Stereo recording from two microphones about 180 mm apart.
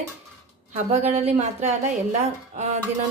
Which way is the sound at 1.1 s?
35° right (ahead or behind).